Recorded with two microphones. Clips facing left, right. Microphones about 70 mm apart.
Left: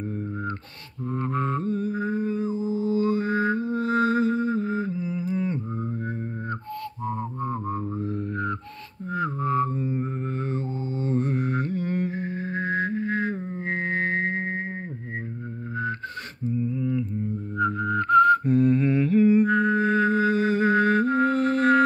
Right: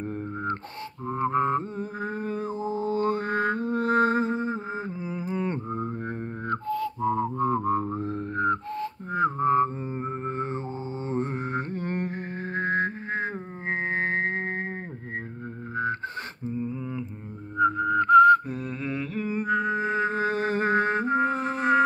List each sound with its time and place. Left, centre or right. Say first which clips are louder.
1.0 s mantra: right 3 dB; right
7.3 s music: right 5 dB; right
7.9 s a sound: even; right
9.1 s music: right 3 dB; right
16.4 s a sound: left 6 dB; right; by 19.4 s centre
19.4 s music: left 4 dB; centre
20.2 s music: left 4 dB; right; by 21.8 s centre